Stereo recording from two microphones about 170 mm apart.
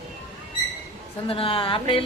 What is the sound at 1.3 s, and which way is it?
Speech, 35° left (ahead or behind).